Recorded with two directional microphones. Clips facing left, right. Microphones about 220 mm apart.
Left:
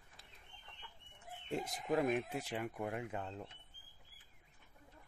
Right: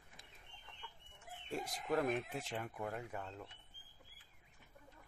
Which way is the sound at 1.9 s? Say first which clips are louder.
Left 2 dB; 5° left (ahead or behind).